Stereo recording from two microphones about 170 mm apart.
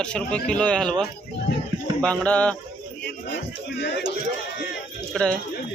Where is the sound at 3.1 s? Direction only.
85° left.